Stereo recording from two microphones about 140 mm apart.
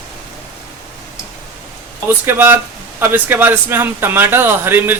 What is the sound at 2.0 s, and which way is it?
Speech, 15° right (ahead or behind).